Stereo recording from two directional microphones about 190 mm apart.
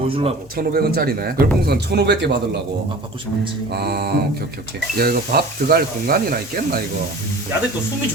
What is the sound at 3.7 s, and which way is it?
A man's voice, 60° right (ahead or behind).